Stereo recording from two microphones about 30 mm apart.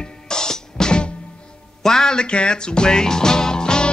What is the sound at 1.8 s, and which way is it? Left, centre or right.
Speech, centre.